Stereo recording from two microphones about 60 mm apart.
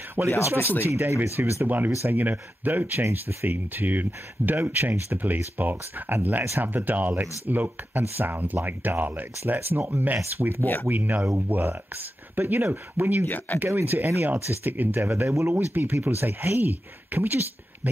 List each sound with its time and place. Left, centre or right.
0.2 s speech: right
0.9 s speech: right
2.0 s speech: right
3.0 s speech: right
10.6 s speech: left
10.9 s speech: right
13.5 s speech: left
13.8 s speech: right
15.0 s speech: right